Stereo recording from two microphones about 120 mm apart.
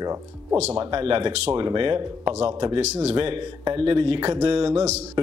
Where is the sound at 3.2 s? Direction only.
50° right (ahead or behind).